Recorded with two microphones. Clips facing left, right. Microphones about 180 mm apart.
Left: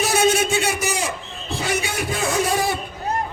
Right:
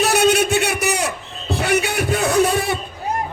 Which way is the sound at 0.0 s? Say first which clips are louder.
Right 3 dB; 65° right (ahead or behind).